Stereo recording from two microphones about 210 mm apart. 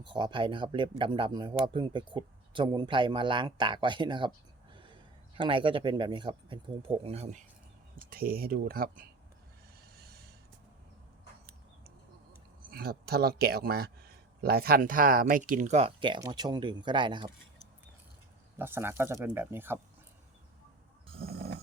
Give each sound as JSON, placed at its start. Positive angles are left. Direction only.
{"t": 0.0, "sound": "speech", "side_deg": -20}
{"t": 4.7, "sound": "a sound", "side_deg": -25}
{"t": 5.4, "sound": "speech", "side_deg": -25}
{"t": 8.1, "sound": "speech", "side_deg": -45}
{"t": 10.0, "sound": "snort", "side_deg": -50}
{"t": 12.7, "sound": "speech", "side_deg": -45}
{"t": 18.6, "sound": "speech", "side_deg": -10}
{"t": 21.2, "sound": "snoring", "side_deg": -50}